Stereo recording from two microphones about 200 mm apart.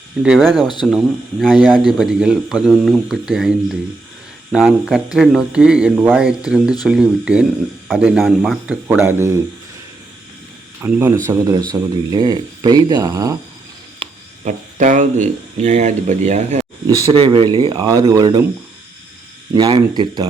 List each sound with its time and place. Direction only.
0.2 s speech: centre (ahead or behind)
10.8 s speech: 10° right (ahead or behind)
14.0 s speech: 40° right (ahead or behind); by 18.4 s 20° right (ahead or behind)
19.5 s speech: 20° right (ahead or behind)